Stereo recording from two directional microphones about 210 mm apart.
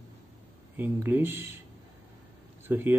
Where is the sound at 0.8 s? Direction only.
10° right (ahead or behind).